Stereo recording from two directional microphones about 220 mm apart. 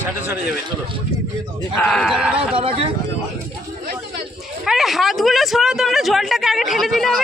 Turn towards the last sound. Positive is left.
turn(degrees=0)  # may be behind; listen again after turning